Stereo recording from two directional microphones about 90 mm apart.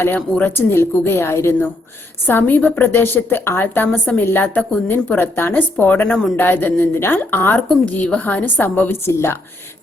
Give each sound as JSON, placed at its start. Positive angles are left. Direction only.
{"t": 0.0, "sound": "a woman's voice", "side_deg": 20}